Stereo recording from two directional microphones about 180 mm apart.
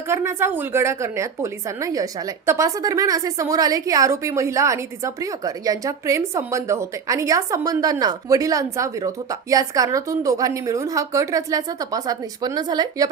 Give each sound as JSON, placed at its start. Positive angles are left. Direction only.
{"t": 0.1, "sound": "a woman's voice", "side_deg": -15}